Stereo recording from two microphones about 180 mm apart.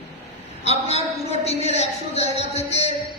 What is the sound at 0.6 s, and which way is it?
A woman's voice, 35° left (ahead or behind).